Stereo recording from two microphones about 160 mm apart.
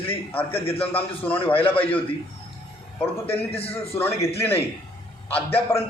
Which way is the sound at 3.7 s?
15° left (ahead or behind).